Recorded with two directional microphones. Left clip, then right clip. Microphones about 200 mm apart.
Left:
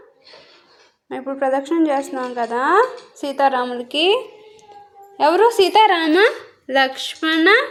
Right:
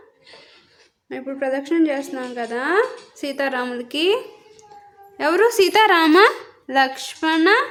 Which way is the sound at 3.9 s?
40° right (ahead or behind).